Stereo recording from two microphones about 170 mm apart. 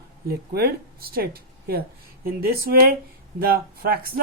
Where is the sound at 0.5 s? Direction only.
65° right (ahead or behind).